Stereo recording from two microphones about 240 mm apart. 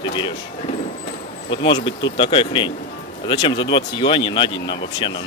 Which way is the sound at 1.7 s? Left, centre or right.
Left.